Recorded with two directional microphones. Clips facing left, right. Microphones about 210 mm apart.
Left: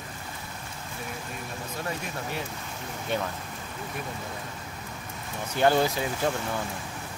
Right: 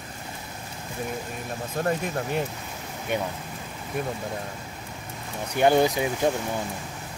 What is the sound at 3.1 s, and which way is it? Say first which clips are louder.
Speech: right 2 dB; 15° right (ahead or behind).